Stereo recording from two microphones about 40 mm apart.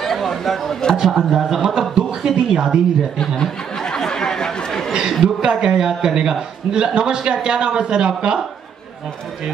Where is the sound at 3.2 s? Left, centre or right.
Centre.